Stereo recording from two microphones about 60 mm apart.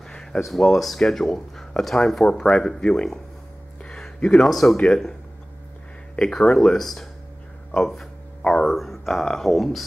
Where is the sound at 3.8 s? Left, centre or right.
Centre.